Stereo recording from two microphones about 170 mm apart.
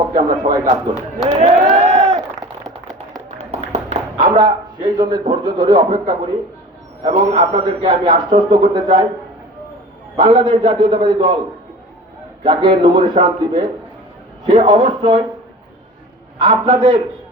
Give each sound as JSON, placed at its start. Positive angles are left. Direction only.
{"t": 0.4, "sound": "speech", "side_deg": -50}
{"t": 1.4, "sound": "run", "side_deg": -40}
{"t": 3.3, "sound": "a sound", "side_deg": -40}
{"t": 4.4, "sound": "a man's voice", "side_deg": -25}
{"t": 7.0, "sound": "a man's voice", "side_deg": -40}
{"t": 10.2, "sound": "a man's voice", "side_deg": -25}
{"t": 12.4, "sound": "a man's voice", "side_deg": -30}
{"t": 16.4, "sound": "speech", "side_deg": -35}